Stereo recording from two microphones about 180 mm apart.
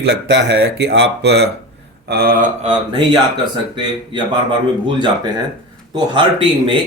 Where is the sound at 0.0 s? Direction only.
70° right (ahead or behind).